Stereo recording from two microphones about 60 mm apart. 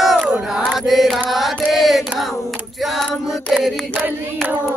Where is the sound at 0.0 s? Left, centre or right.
Centre.